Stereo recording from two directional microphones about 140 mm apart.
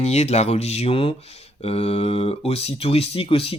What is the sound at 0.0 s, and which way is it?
Speech, 50° left (ahead or behind).